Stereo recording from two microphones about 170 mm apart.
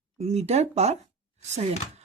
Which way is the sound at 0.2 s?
40° right (ahead or behind).